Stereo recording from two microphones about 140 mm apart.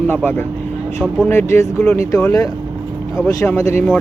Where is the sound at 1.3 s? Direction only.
15° left (ahead or behind).